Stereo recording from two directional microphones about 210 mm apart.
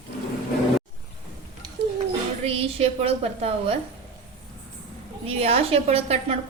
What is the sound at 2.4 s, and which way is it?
A woman's voice, 30° right (ahead or behind).